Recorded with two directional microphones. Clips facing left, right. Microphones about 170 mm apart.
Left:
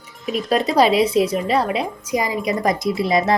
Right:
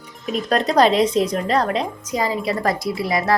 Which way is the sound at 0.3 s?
5° left (ahead or behind).